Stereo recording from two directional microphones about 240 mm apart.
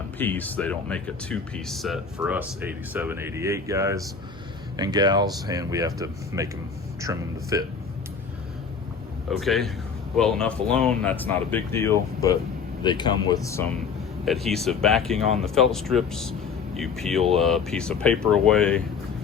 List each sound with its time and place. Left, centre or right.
0.2 s speech: centre
9.3 s speech: centre
14.3 s speech: centre